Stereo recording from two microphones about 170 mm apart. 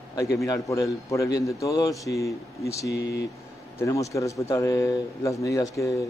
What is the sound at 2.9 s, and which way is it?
Speech, 80° left.